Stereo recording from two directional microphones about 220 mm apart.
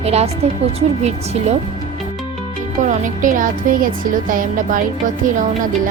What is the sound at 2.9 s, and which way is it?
Speech, 35° right (ahead or behind).